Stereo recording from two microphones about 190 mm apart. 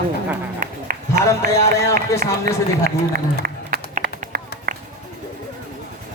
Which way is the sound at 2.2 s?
50° right (ahead or behind).